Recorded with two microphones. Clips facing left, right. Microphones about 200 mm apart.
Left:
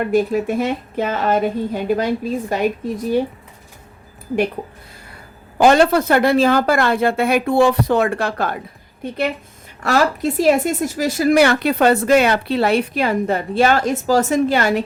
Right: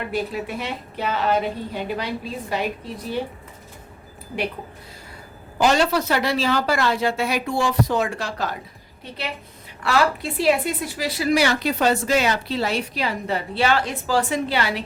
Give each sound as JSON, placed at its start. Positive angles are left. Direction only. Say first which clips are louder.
{"t": 0.0, "sound": "a woman's voice", "louder": "left 9 dB", "side_deg": 45}
{"t": 5.5, "sound": "a woman's voice", "louder": "left 6 dB", "side_deg": 55}
{"t": 9.8, "sound": "a woman's voice", "louder": "left 4 dB", "side_deg": 45}